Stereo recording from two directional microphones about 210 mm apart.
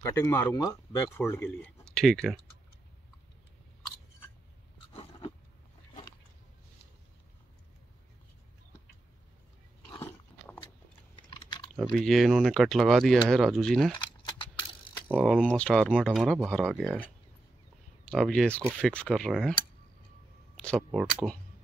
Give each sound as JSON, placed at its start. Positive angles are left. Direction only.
{"t": 0.0, "sound": "speech", "side_deg": 10}
{"t": 9.8, "sound": "biting", "side_deg": 10}
{"t": 11.1, "sound": "chewing", "side_deg": 20}
{"t": 11.7, "sound": "speech", "side_deg": 0}
{"t": 13.9, "sound": "a sound", "side_deg": 20}
{"t": 15.1, "sound": "speech", "side_deg": 5}
{"t": 20.6, "sound": "speech", "side_deg": 0}